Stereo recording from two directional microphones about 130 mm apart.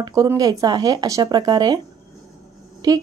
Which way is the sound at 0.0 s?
25° right (ahead or behind).